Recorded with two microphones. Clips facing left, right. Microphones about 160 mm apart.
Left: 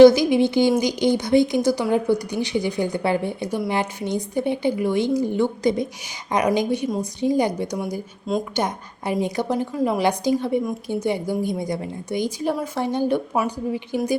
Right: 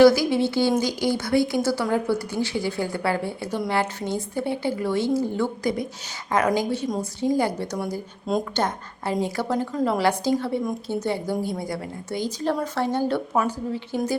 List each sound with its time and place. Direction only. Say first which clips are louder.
0.0 s a woman's voice: left 4 dB; 20° left (ahead or behind)